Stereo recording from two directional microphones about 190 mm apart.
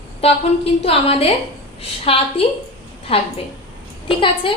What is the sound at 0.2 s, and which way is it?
A woman's voice, 30° left (ahead or behind).